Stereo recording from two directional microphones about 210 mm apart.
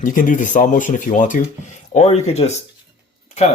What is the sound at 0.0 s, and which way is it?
Speech, 40° left (ahead or behind).